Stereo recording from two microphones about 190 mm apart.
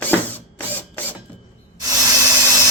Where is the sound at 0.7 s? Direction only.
10° left (ahead or behind).